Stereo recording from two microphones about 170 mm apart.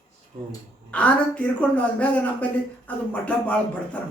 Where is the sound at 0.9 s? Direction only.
10° left (ahead or behind).